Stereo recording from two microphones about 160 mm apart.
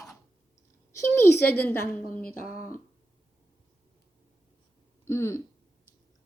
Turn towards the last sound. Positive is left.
turn(degrees=15)  # may be behind; listen again after turning